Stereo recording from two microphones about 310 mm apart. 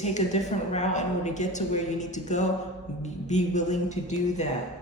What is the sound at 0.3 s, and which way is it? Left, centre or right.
A woman's voice, left.